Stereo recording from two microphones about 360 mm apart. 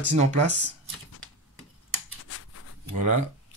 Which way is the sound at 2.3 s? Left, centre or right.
Left.